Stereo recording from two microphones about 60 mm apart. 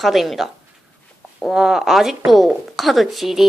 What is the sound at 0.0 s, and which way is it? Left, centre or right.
Speech, centre.